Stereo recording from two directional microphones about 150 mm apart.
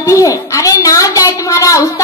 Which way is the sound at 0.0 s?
20° left (ahead or behind).